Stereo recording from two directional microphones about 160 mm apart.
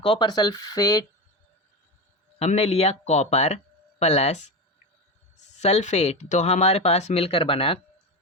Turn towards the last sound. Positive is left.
turn(degrees=35)  # may be behind; listen again after turning